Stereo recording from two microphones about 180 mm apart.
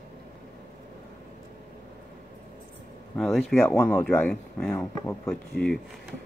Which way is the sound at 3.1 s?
5° left (ahead or behind).